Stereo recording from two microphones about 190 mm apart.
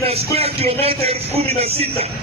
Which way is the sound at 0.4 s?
30° right (ahead or behind).